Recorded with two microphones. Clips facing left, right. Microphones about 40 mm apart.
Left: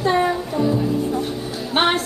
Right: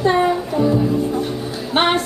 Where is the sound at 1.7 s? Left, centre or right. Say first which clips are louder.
Right 2 dB; centre.